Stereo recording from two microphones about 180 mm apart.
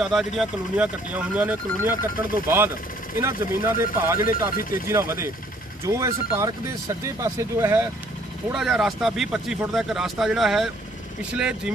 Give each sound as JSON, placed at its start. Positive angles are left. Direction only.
{"t": 0.0, "sound": "speech", "side_deg": 0}
{"t": 4.2, "sound": "speech", "side_deg": 50}
{"t": 4.8, "sound": "speech", "side_deg": -15}
{"t": 8.5, "sound": "speech", "side_deg": -5}